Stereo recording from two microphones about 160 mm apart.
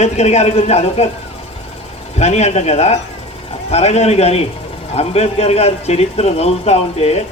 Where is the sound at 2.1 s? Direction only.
45° left (ahead or behind).